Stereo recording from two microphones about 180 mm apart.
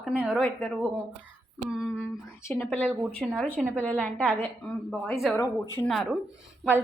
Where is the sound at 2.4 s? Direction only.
15° left (ahead or behind).